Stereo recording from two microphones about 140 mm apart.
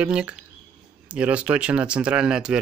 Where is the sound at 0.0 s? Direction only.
10° right (ahead or behind).